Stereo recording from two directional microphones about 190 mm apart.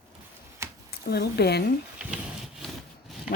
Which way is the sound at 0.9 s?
55° left (ahead or behind).